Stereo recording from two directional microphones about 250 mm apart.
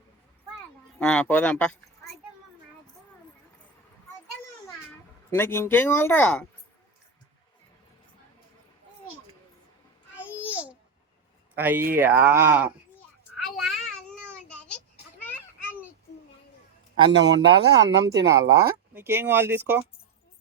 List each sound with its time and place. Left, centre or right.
0.9 s speech: centre
5.3 s speech: centre
10.2 s babbling: centre
11.5 s speech: centre
13.3 s child singing: centre
15.2 s children playing: centre
17.1 s speech: right
18.9 s speech: centre